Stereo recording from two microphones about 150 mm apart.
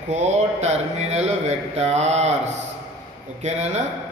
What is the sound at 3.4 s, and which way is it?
Speech, 50° right (ahead or behind).